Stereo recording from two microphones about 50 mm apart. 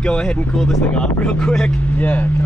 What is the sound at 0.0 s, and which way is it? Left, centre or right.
Speech, centre.